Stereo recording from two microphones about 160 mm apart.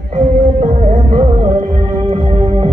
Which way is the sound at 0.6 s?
35° right (ahead or behind).